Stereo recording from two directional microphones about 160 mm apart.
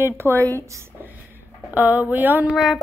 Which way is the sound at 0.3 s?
15° left (ahead or behind).